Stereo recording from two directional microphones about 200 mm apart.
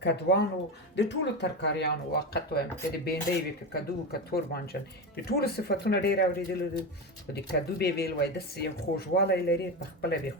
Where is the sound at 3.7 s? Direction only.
50° left (ahead or behind).